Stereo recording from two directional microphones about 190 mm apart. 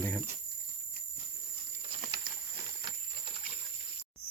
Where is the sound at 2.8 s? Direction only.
30° right (ahead or behind).